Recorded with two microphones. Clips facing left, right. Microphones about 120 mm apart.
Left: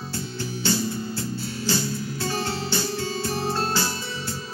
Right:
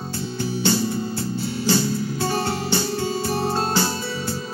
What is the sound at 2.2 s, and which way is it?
Music, 50° right (ahead or behind).